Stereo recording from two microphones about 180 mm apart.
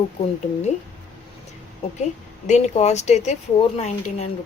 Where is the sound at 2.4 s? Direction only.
40° left (ahead or behind).